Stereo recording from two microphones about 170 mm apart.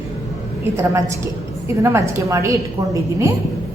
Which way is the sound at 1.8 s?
15° right (ahead or behind).